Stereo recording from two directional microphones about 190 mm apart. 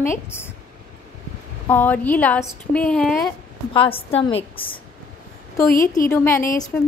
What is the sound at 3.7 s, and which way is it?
Speech, 30° left (ahead or behind).